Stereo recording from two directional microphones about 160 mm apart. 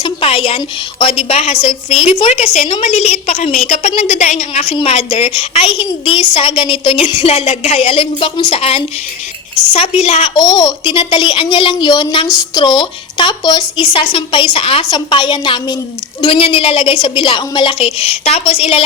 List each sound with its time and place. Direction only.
0.0 s a woman's voice: 35° left (ahead or behind)
10.3 s a woman's voice: 25° left (ahead or behind)